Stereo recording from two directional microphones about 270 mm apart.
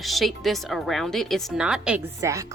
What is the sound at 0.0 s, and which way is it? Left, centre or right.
A woman's voice, centre.